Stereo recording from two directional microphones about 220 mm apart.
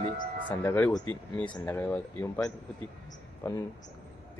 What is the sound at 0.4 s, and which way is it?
Speech, 10° left (ahead or behind).